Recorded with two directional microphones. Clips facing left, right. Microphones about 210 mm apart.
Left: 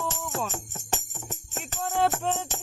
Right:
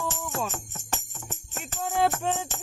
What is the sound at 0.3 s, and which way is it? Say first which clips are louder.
Music: even; 20° left (ahead or behind).